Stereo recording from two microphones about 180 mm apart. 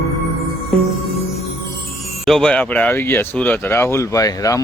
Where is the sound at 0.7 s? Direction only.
Centre (ahead or behind).